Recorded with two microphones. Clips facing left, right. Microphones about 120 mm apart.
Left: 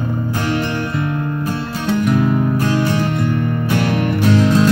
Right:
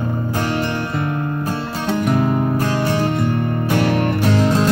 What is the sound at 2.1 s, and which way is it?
Music, 35° right (ahead or behind).